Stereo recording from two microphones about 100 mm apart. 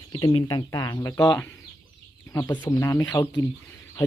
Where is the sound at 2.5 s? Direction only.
40° left (ahead or behind).